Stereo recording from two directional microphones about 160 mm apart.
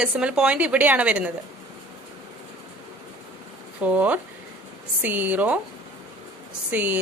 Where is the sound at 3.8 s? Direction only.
10° right (ahead or behind).